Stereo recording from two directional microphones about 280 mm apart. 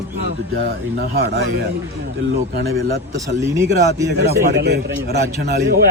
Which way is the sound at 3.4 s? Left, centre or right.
Centre.